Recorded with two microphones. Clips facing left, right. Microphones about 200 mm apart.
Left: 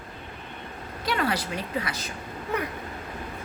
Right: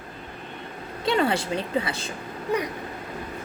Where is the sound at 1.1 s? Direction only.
25° right (ahead or behind).